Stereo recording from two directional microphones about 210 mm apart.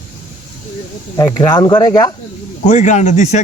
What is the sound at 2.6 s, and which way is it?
Speech, 35° left (ahead or behind).